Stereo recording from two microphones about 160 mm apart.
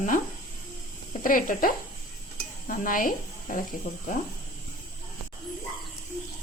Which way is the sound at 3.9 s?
70° left (ahead or behind).